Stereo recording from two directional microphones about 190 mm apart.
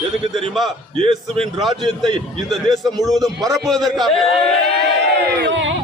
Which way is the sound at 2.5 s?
Centre (ahead or behind).